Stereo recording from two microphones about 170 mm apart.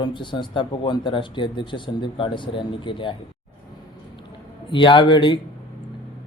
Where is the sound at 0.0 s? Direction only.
30° left (ahead or behind).